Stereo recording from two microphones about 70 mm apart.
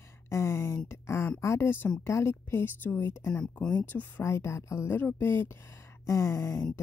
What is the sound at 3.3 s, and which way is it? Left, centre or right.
Speech, centre.